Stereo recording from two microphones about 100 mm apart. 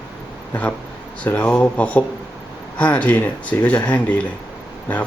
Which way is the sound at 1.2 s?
15° left (ahead or behind).